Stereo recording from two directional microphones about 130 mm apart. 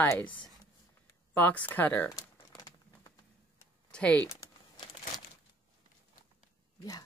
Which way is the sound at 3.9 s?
10° left (ahead or behind).